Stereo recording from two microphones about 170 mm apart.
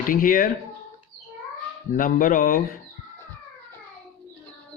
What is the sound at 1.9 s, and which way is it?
Speech, 55° left (ahead or behind).